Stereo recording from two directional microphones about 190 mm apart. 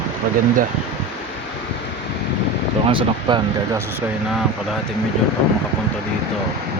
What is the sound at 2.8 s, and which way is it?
Speech, 25° right (ahead or behind).